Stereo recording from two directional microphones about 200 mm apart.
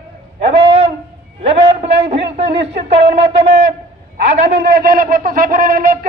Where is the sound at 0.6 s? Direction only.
30° right (ahead or behind).